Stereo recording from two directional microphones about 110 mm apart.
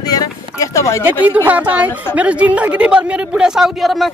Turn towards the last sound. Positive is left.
turn(degrees=0)  # may be behind; listen again after turning